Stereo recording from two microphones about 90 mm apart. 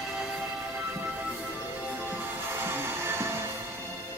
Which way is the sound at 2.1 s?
25° right (ahead or behind).